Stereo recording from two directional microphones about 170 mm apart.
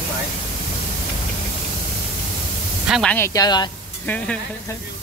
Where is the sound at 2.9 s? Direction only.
5° left (ahead or behind).